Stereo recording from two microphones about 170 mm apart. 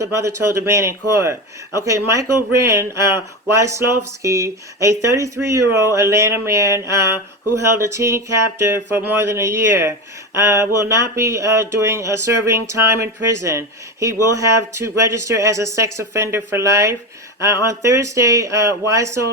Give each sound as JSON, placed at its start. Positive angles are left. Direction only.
{"t": 0.0, "sound": "speech", "side_deg": -15}